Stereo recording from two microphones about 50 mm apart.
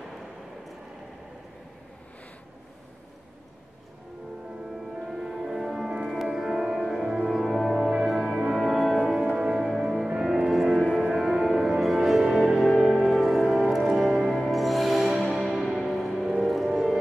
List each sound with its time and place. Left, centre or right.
4.9 s music: centre
9.7 s music: centre
10.0 s music: centre
10.3 s music: centre